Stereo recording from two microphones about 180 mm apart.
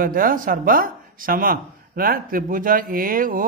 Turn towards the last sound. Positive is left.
turn(degrees=-50)  # may be behind; listen again after turning